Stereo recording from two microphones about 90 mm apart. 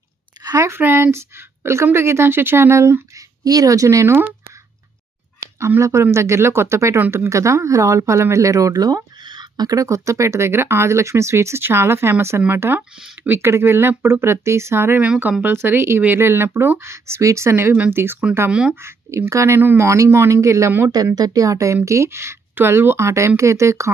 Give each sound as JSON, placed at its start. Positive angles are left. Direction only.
{"t": 0.6, "sound": "speech", "side_deg": -25}
{"t": 3.4, "sound": "speech", "side_deg": -40}
{"t": 5.4, "sound": "speech", "side_deg": -30}
{"t": 7.0, "sound": "speech", "side_deg": -20}
{"t": 7.3, "sound": "speech", "side_deg": -35}
{"t": 15.0, "sound": "speech", "side_deg": -15}